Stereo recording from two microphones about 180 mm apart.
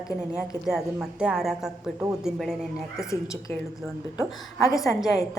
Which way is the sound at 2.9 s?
15° left (ahead or behind).